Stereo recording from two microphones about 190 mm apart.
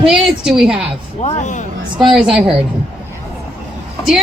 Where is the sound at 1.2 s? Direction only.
35° left (ahead or behind).